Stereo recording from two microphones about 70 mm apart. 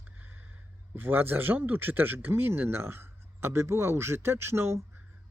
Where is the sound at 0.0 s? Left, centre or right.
Right.